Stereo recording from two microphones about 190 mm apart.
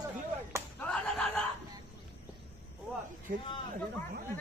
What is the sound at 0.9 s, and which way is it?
Slap, 5° left (ahead or behind).